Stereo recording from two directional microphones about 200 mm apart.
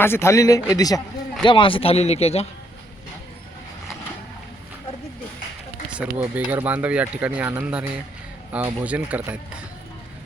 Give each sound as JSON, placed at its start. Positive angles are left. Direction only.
{"t": 0.0, "sound": "speech", "side_deg": 10}
{"t": 5.9, "sound": "speech", "side_deg": -5}